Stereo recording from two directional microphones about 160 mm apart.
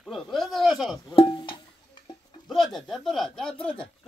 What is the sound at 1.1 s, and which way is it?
Music, 30° left (ahead or behind).